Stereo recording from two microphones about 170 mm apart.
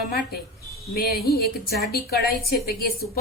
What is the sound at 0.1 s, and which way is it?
A woman's voice, 65° left (ahead or behind).